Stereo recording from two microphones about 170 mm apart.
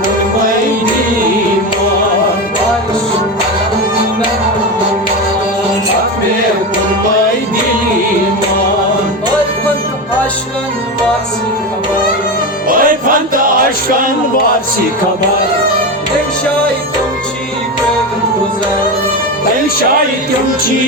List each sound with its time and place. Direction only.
12.6 s music: 55° right (ahead or behind)